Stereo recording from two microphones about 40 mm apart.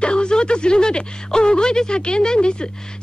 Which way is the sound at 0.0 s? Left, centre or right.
Left.